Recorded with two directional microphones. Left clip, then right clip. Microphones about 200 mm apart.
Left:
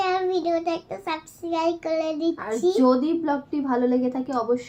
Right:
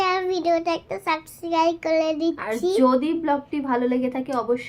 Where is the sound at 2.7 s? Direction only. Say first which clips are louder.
Right 3 dB; centre (ahead or behind).